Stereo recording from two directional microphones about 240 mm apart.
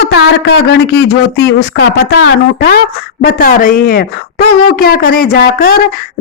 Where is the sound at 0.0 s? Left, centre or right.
Left.